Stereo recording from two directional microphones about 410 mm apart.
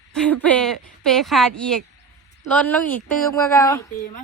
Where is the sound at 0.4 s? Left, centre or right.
Centre.